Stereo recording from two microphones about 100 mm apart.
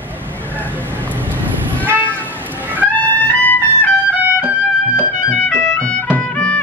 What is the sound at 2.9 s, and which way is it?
Trumpet, 20° left (ahead or behind).